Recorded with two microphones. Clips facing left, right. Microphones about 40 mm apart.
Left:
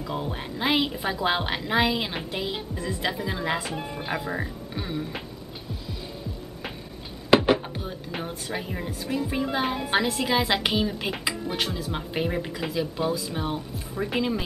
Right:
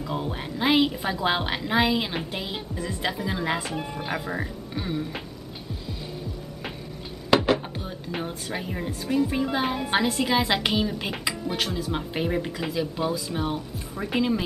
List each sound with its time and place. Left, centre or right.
0.0 s speech: centre
7.2 s chopping: centre
7.7 s speech: centre